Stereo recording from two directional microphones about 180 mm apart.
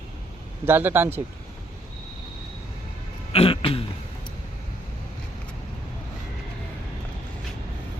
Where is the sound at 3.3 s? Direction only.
30° left (ahead or behind).